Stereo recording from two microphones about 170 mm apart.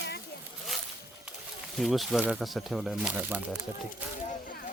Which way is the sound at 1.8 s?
Centre (ahead or behind).